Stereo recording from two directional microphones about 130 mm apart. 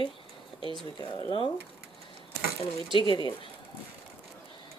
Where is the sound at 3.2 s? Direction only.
40° left (ahead or behind).